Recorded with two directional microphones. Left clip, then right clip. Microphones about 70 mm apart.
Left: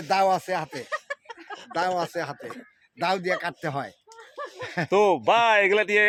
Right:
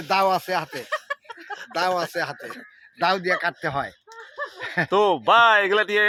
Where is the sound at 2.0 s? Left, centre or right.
Left.